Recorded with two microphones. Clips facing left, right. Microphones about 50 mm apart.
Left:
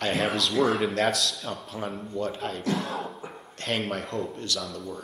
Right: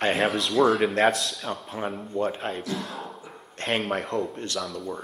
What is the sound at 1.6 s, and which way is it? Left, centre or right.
Speech, right.